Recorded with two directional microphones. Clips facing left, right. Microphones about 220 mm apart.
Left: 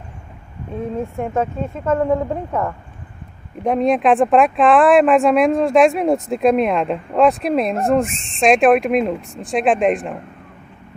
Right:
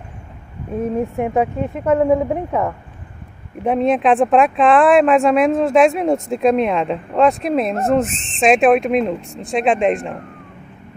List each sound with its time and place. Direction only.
0.7 s a woman's voice: 20° right (ahead or behind)
3.6 s speech: centre (ahead or behind)